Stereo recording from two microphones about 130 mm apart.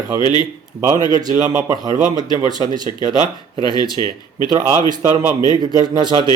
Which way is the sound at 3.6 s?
30° left (ahead or behind).